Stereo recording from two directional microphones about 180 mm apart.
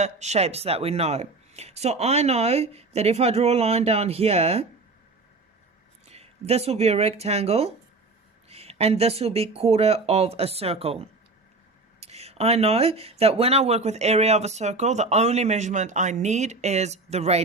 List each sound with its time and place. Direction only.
0.0 s speech: 40° right (ahead or behind)
6.1 s speech: 35° right (ahead or behind)